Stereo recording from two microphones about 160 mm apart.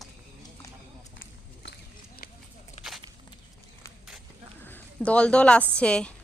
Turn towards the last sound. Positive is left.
turn(degrees=5)  # may be behind; listen again after turning